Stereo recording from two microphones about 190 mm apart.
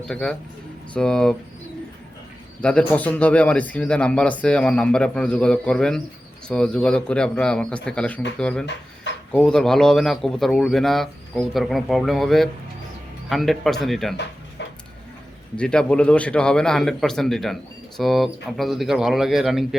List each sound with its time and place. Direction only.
0.0 s a man's voice: 5° left (ahead or behind)
2.6 s a man's voice: 5° left (ahead or behind)
14.6 s a sound: 65° left (ahead or behind)
15.5 s a man's voice: 5° left (ahead or behind)